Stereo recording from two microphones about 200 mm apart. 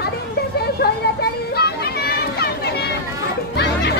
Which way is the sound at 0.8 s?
50° left (ahead or behind).